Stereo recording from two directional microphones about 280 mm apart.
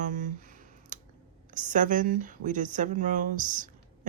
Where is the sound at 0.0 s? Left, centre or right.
Right.